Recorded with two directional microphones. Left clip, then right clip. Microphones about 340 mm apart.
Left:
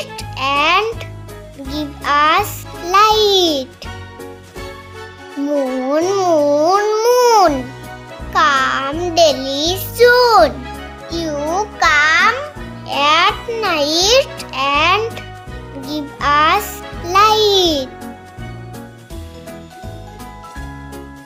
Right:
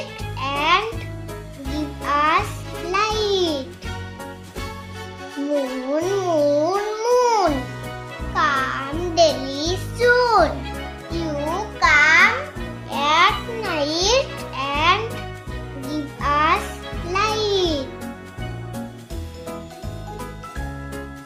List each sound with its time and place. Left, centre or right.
0.2 s music: left
5.9 s babbling: left
8.3 s music: left